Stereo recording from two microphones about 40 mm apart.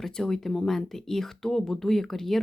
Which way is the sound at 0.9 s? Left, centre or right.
Centre.